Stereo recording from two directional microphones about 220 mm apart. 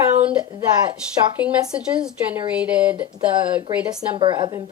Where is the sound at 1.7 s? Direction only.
5° right (ahead or behind).